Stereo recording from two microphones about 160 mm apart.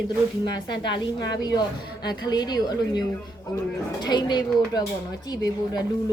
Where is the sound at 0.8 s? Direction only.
90° left.